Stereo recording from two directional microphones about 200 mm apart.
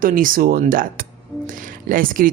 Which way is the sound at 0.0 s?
45° right (ahead or behind).